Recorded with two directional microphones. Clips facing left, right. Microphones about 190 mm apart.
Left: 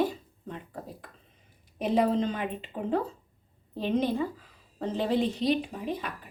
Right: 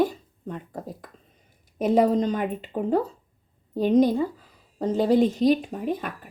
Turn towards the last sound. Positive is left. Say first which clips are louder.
# right 5 dB
turn(degrees=-50)  # may be behind; listen again after turning